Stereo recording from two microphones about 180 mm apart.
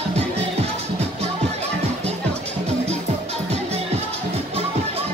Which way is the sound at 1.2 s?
35° right (ahead or behind).